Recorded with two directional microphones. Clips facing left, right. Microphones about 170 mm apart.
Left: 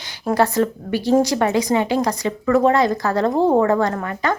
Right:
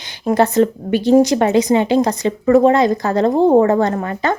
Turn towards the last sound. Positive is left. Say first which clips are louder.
# right 3 dB
turn(degrees=-25)  # may be behind; listen again after turning